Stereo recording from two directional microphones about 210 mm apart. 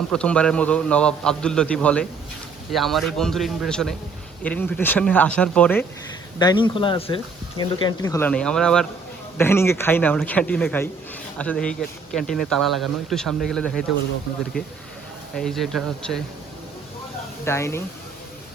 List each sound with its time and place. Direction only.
0.1 s a man's voice: 5° left (ahead or behind)
6.4 s a man's voice: 20° left (ahead or behind)
8.3 s a man's voice: 5° left (ahead or behind)
15.4 s speech: centre (ahead or behind)
17.4 s speech: 10° left (ahead or behind)